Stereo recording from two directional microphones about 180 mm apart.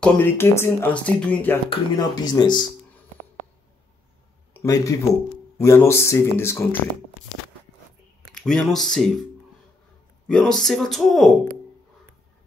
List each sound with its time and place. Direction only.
0.0 s speech: 10° left (ahead or behind)
1.7 s speech: 20° left (ahead or behind)
4.6 s speech: 20° left (ahead or behind)
8.4 s speech: centre (ahead or behind)
10.2 s speech: 5° left (ahead or behind)